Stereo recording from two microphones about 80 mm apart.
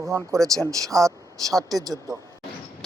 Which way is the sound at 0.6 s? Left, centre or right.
Right.